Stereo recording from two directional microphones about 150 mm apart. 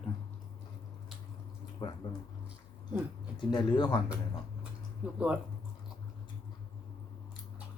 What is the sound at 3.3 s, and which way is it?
Speech, 30° left (ahead or behind).